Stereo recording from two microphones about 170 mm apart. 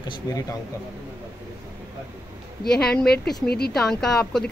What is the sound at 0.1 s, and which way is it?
Speech, 20° left (ahead or behind).